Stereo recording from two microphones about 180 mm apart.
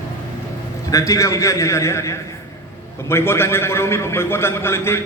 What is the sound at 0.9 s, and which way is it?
A man's voice, 15° left (ahead or behind).